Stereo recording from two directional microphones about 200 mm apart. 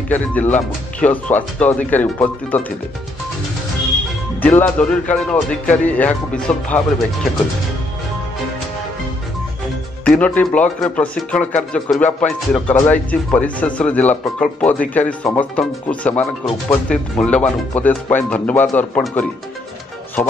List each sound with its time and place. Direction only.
0.1 s speech: 10° left (ahead or behind)
4.4 s speech: 5° left (ahead or behind)
10.0 s speech: 5° left (ahead or behind)